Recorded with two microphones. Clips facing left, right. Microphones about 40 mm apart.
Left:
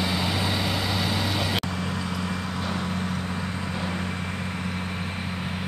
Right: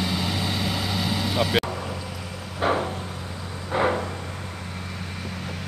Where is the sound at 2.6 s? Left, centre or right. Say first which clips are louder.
Right 9 dB; right.